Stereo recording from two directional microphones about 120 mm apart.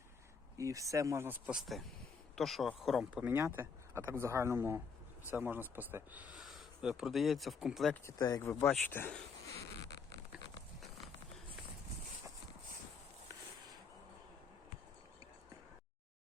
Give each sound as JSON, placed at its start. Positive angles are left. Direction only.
{"t": 0.5, "sound": "speech", "side_deg": -25}
{"t": 1.5, "sound": "speech", "side_deg": 0}
{"t": 3.2, "sound": "speech", "side_deg": -15}
{"t": 6.4, "sound": "speech", "side_deg": 0}
{"t": 8.0, "sound": "speech", "side_deg": 25}